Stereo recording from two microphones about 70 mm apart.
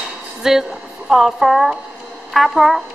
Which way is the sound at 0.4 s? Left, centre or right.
Centre.